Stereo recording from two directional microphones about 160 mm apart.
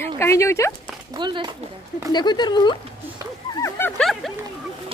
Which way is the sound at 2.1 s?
25° left (ahead or behind).